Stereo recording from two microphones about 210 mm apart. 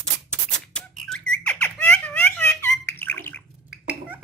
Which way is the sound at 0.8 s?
5° left (ahead or behind).